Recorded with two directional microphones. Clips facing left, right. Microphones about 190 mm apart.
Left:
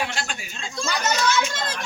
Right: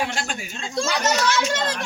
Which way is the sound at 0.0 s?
45° right (ahead or behind).